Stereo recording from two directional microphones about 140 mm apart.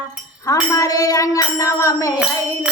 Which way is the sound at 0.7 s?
25° left (ahead or behind).